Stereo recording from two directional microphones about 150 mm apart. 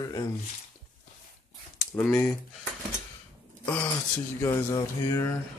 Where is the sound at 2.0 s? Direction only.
10° left (ahead or behind).